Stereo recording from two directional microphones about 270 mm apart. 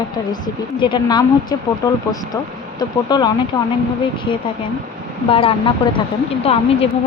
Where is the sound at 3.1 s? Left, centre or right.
Centre.